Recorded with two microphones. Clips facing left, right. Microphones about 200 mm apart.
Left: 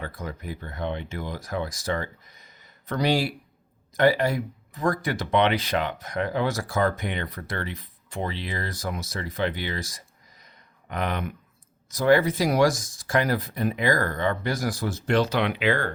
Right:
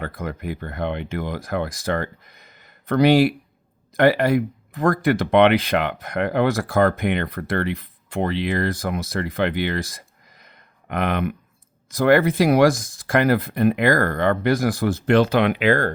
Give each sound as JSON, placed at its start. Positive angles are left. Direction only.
{"t": 0.0, "sound": "speech", "side_deg": -60}